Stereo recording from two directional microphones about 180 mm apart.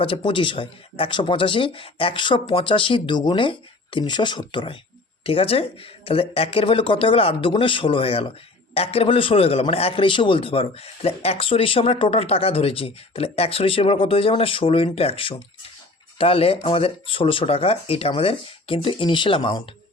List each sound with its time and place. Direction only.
0.0 s a man's voice: 30° left (ahead or behind)